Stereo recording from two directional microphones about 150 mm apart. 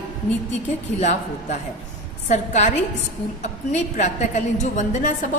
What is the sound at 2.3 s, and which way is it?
A woman's voice, 50° left (ahead or behind).